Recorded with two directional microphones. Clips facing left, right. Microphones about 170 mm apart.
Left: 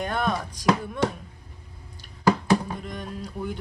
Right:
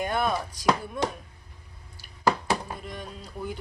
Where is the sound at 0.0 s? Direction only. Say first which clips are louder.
Even; 5° right (ahead or behind).